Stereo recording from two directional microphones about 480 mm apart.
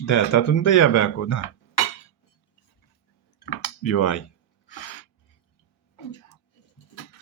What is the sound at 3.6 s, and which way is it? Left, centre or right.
Speech, left.